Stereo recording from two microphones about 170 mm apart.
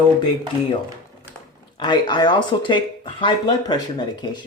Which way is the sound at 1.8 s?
25° left (ahead or behind).